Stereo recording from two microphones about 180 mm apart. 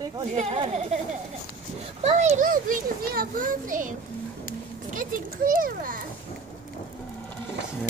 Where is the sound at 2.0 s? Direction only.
40° right (ahead or behind).